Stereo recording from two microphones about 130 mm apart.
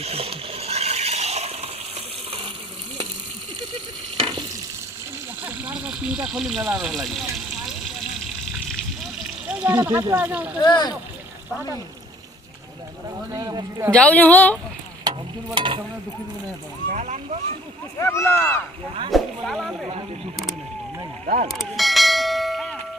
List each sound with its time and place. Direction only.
0.0 s water: 50° right (ahead or behind)
4.2 s stir: 40° right (ahead or behind)
5.4 s a sound: 15° right (ahead or behind)
6.7 s speech: 5° right (ahead or behind)
9.5 s speech: 10° right (ahead or behind)
9.8 s speech: 20° right (ahead or behind)
10.6 s speech: 30° left (ahead or behind)
13.3 s speech: 30° right (ahead or behind)
13.9 s a woman's voice: 10° left (ahead or behind)
15.5 s speech: 40° right (ahead or behind)
16.9 s speech: 65° right (ahead or behind)
18.0 s speech: 20° left (ahead or behind)
19.1 s speech: centre (ahead or behind)
21.4 s church bell: centre (ahead or behind)